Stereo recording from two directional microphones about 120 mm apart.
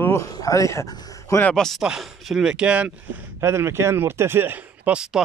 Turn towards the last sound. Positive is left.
turn(degrees=-5)  # may be behind; listen again after turning